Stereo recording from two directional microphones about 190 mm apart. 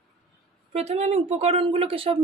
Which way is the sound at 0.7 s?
35° right (ahead or behind).